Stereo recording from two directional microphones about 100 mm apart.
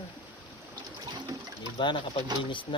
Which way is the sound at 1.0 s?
40° right (ahead or behind).